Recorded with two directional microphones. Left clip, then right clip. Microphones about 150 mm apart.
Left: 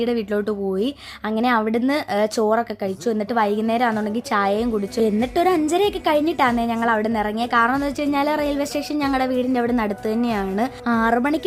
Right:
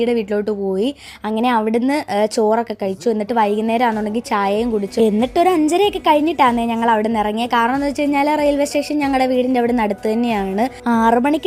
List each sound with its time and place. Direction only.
0.0 s a woman's voice: 10° right (ahead or behind)